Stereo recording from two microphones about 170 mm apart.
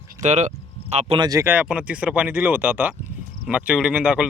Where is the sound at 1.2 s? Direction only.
20° right (ahead or behind).